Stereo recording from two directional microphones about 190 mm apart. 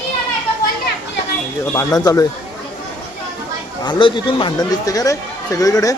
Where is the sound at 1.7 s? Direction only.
20° left (ahead or behind).